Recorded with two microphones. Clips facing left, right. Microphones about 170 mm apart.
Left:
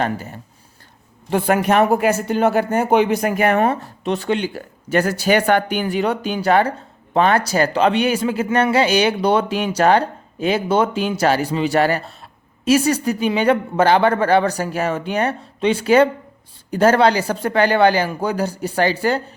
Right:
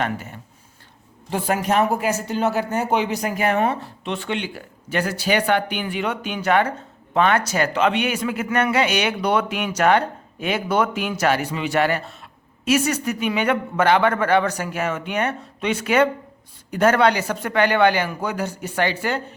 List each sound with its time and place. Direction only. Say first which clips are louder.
0.0 s speech: left 3 dB; 35° left (ahead or behind)
1.3 s speech: left 5 dB; 60° left (ahead or behind); by 19.2 s 35° left (ahead or behind)